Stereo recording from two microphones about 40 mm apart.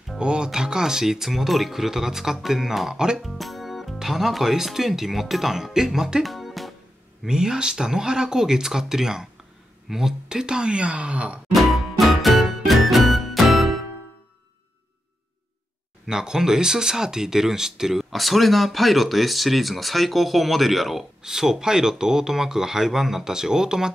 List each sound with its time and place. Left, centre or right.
0.2 s speech: centre
6.2 s music: centre
7.2 s speech: centre
11.5 s music: centre
16.1 s speech: centre
18.1 s speech: centre